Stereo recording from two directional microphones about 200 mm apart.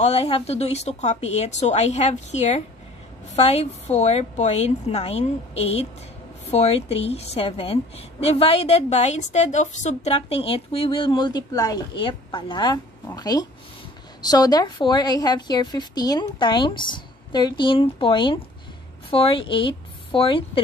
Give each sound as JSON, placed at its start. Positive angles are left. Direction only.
{"t": 0.0, "sound": "a woman's voice", "side_deg": 30}